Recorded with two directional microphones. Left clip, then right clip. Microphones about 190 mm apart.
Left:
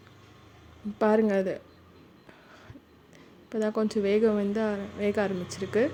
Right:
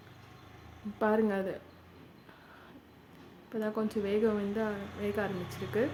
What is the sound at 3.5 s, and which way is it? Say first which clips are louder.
Speech: left 6 dB; 35° left (ahead or behind).